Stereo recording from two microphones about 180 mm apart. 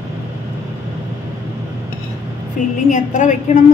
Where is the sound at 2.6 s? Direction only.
45° left (ahead or behind).